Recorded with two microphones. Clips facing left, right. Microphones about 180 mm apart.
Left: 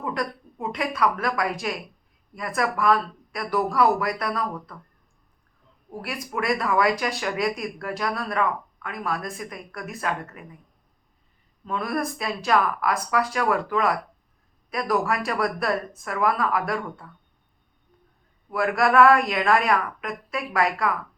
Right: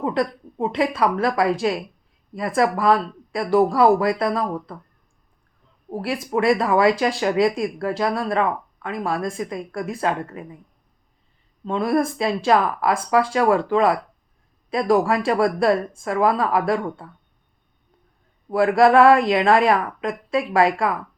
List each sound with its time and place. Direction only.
0.0 s a sound: 30° right (ahead or behind)
0.6 s speech: 30° right (ahead or behind)
5.9 s speech: 25° right (ahead or behind)
11.6 s speech: 25° right (ahead or behind)
18.5 s speech: 25° right (ahead or behind)